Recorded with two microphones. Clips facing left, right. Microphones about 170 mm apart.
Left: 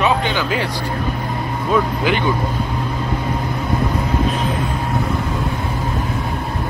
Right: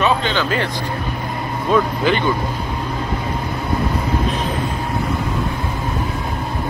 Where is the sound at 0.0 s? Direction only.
15° left (ahead or behind).